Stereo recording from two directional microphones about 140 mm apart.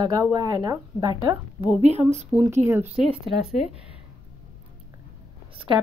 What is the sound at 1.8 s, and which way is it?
Speech, 55° right (ahead or behind).